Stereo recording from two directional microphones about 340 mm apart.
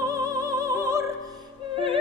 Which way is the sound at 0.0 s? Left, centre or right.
Centre.